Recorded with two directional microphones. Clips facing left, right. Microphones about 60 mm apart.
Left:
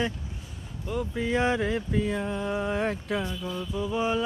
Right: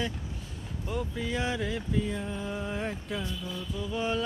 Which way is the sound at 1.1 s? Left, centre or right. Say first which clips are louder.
Left 9 dB; left.